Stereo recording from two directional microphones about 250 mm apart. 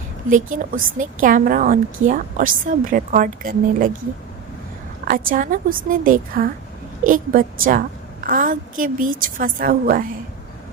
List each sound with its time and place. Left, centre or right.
0.5 s a woman's voice: right
5.0 s a woman's voice: right